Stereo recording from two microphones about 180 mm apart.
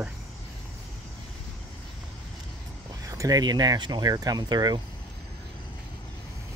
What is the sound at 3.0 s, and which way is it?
Speech, 20° right (ahead or behind).